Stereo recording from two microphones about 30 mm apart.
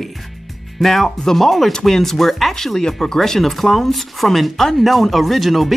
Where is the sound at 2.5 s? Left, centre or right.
Centre.